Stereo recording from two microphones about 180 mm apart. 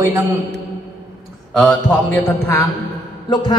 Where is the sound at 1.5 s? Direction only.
5° left (ahead or behind).